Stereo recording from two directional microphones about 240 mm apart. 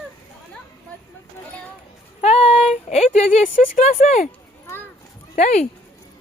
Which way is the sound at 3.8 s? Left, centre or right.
Left.